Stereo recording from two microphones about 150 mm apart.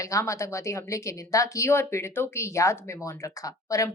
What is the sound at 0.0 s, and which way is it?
Speech, 20° left (ahead or behind).